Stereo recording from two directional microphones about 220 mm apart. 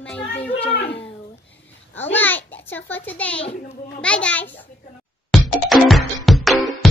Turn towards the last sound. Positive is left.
turn(degrees=0)  # may be behind; listen again after turning